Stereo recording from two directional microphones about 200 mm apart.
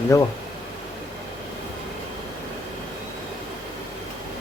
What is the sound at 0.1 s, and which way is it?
Speech, 15° left (ahead or behind).